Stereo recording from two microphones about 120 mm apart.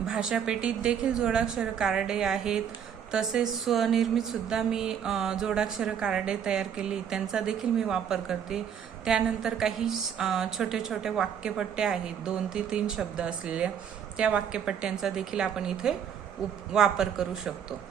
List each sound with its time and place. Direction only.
0.0 s a woman's voice: 5° right (ahead or behind)